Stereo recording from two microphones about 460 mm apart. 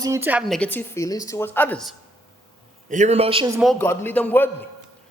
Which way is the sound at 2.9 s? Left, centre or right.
Centre.